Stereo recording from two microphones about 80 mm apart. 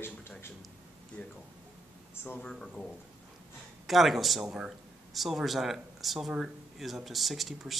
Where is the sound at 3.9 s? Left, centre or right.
Centre.